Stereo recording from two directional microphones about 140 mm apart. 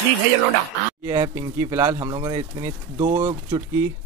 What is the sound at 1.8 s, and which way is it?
Speech, 30° right (ahead or behind).